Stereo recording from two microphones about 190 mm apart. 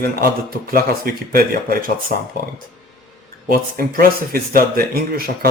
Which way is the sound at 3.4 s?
50° right (ahead or behind).